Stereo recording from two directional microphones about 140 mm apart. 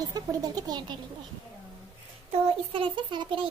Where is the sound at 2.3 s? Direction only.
40° right (ahead or behind).